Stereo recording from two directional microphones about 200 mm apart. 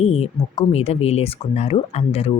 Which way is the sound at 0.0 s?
30° left (ahead or behind).